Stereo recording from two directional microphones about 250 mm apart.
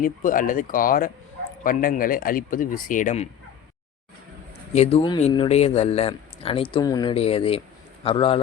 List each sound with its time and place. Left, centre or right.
0.0 s speech: left
4.7 s speech: left